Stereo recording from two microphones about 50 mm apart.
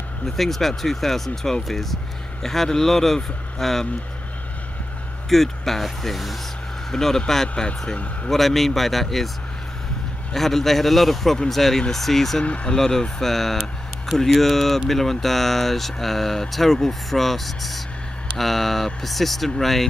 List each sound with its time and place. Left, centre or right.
0.4 s speech: centre
5.3 s a man's voice: centre; by 8.3 s left
8.3 s speech: centre
10.3 s speech: centre
12.4 s a man's voice: left
12.7 s speech: centre